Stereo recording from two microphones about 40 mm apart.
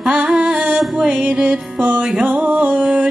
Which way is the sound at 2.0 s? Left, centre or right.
Centre.